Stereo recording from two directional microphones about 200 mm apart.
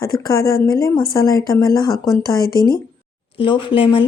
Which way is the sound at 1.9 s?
Centre (ahead or behind).